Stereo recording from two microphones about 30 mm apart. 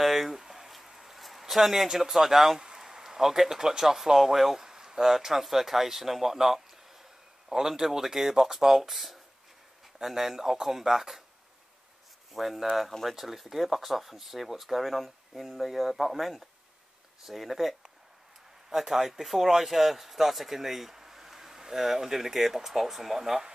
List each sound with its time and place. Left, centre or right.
0.0 s a sound: centre
1.4 s speech: centre
12.4 s speech: centre
18.7 s speech: centre